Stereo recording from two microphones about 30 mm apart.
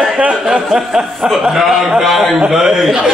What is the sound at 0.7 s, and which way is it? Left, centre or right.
Speech, centre.